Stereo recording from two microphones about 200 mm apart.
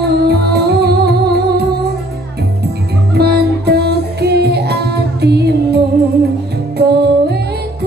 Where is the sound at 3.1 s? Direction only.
55° right (ahead or behind).